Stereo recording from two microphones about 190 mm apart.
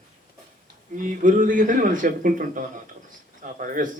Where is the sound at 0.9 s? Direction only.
45° right (ahead or behind).